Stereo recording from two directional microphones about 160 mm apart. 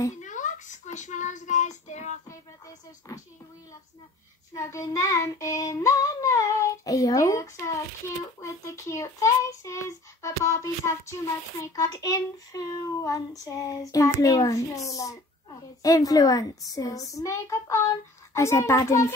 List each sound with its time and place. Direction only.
0.2 s a sound: 50° left (ahead or behind)
0.9 s child singing: 50° left (ahead or behind)
3.1 s speech: 20° left (ahead or behind)
4.6 s child singing: 20° left (ahead or behind)
17.1 s speech: 20° left (ahead or behind)